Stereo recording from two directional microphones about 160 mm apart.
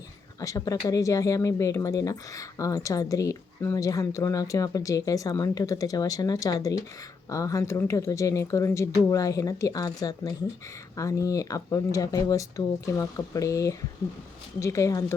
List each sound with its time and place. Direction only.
0.3 s speech: 20° left (ahead or behind)